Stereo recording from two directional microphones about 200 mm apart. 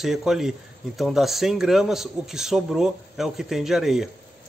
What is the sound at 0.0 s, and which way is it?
Speech, centre (ahead or behind).